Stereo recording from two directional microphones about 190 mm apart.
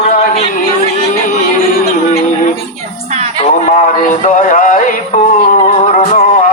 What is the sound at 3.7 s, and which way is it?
Music, 40° left (ahead or behind).